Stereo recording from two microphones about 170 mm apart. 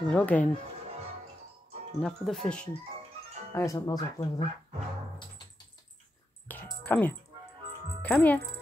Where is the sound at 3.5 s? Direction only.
15° left (ahead or behind).